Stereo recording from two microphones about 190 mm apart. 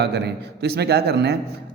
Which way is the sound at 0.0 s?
60° right (ahead or behind).